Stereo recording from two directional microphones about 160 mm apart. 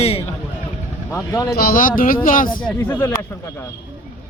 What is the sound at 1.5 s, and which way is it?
Speech, 65° left (ahead or behind).